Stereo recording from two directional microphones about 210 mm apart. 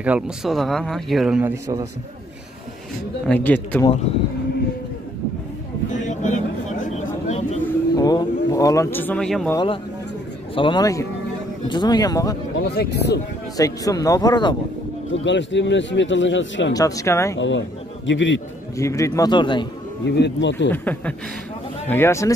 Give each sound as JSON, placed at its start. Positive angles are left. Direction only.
{"t": 0.0, "sound": "speech", "side_deg": -5}
{"t": 3.3, "sound": "a man's voice", "side_deg": 10}
{"t": 5.9, "sound": "vehicle", "side_deg": 35}
{"t": 7.6, "sound": "a sound", "side_deg": 20}
{"t": 9.5, "sound": "speech", "side_deg": 20}
{"t": 12.6, "sound": "speech", "side_deg": 50}
{"t": 13.6, "sound": "a man's voice", "side_deg": 15}
{"t": 15.2, "sound": "speech", "side_deg": 60}
{"t": 16.7, "sound": "a man's voice", "side_deg": 15}
{"t": 17.4, "sound": "a man's voice", "side_deg": 60}
{"t": 18.8, "sound": "a man's voice", "side_deg": 15}
{"t": 20.1, "sound": "speech", "side_deg": 55}
{"t": 20.7, "sound": "a man's voice", "side_deg": 10}